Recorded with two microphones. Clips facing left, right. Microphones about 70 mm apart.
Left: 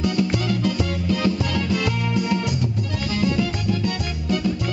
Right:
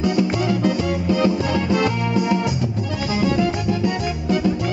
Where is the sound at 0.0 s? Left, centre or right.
Centre.